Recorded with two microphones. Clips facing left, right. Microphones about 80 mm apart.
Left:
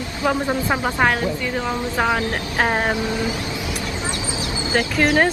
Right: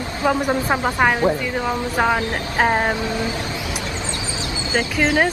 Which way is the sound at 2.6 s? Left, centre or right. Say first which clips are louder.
Right 2 dB; centre.